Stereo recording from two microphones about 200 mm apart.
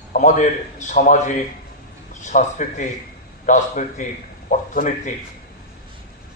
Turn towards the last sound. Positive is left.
turn(degrees=40)  # may be behind; listen again after turning